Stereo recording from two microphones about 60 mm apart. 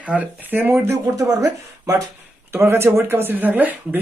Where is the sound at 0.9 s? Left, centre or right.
Right.